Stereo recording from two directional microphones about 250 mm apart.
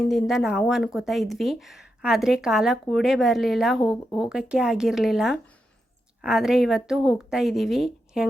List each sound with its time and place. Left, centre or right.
0.1 s speech: centre